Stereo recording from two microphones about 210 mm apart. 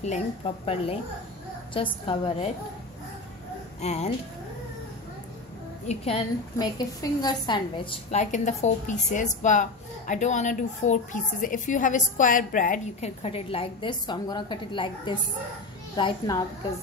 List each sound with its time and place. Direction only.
0.4 s a woman's voice: 25° left (ahead or behind)
1.7 s a woman's voice: 25° left (ahead or behind)
3.8 s a woman's voice: 30° left (ahead or behind)
5.9 s a woman's voice: 25° left (ahead or behind)